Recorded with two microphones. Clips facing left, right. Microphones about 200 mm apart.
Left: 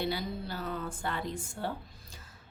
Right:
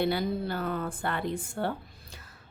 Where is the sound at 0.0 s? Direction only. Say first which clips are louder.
Right 6 dB; 60° right (ahead or behind).